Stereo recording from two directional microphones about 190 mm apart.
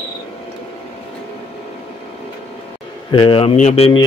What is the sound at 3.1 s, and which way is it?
Speech, 25° left (ahead or behind).